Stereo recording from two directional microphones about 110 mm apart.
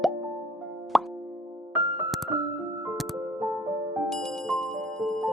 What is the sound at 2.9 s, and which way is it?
Music, centre (ahead or behind).